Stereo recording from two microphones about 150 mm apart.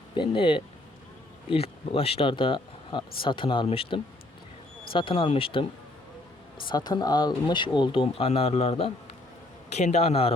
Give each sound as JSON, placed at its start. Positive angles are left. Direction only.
{"t": 0.1, "sound": "a man's voice", "side_deg": 35}